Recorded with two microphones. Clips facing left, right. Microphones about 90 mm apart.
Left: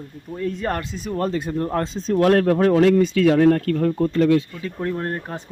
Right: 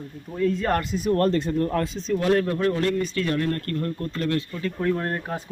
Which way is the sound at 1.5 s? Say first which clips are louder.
Left 1 dB; 25° left (ahead or behind).